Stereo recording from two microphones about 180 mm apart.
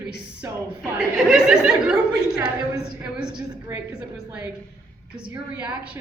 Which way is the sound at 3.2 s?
25° right (ahead or behind).